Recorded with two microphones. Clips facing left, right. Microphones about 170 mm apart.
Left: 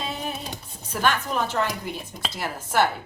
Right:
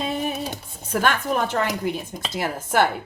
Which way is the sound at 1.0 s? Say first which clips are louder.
Right 1 dB; 55° right (ahead or behind).